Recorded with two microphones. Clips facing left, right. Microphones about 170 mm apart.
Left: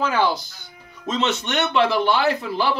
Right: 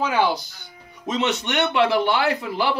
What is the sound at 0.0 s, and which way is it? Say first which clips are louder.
Speech: even; 15° right (ahead or behind).